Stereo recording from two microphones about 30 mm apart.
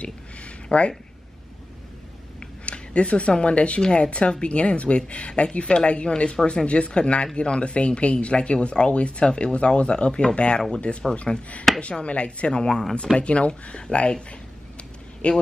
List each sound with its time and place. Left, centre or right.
0.0 s speech: left
2.4 s speech: left
3.8 s a woman's voice: left
8.9 s speech: left
9.2 s speech: left
9.5 s a woman's voice: left
11.9 s a woman's voice: left
15.2 s speech: left